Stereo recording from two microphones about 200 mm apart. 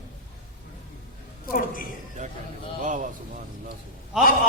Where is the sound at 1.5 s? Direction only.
45° left (ahead or behind).